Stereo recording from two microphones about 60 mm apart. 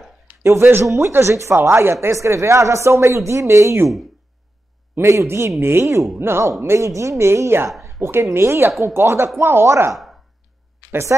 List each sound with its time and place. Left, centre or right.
0.4 s a woman's voice: right
0.8 s a woman's voice: right
4.9 s a woman's voice: right